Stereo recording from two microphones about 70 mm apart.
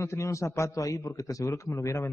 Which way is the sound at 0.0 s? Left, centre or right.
Left.